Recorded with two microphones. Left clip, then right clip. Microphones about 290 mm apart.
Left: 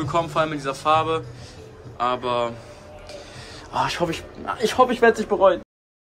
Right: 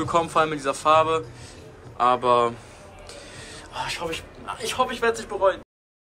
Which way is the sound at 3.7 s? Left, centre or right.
Left.